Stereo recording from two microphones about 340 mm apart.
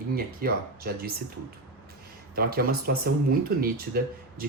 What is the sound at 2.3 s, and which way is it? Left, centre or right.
Speech, right.